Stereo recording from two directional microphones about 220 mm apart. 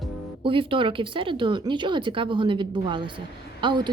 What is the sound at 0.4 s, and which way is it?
Speech, 25° right (ahead or behind).